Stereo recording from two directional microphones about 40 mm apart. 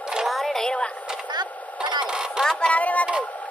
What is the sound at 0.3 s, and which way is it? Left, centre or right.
Music, centre.